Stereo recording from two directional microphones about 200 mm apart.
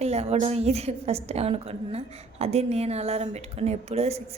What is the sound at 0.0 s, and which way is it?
A woman's voice, 30° right (ahead or behind).